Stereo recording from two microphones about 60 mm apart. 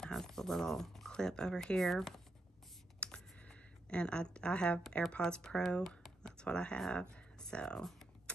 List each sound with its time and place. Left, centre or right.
0.0 s speech: centre
3.0 s a sound: centre
5.1 s speech: centre
5.9 s computer keyboard: centre
6.3 s speech: centre